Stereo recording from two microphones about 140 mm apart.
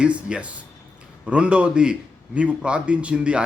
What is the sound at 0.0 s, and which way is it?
A man's voice, 10° right (ahead or behind).